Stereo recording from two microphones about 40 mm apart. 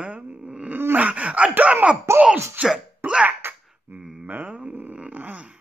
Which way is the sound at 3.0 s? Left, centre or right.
Right.